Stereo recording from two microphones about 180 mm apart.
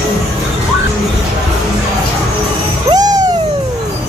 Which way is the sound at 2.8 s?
20° right (ahead or behind).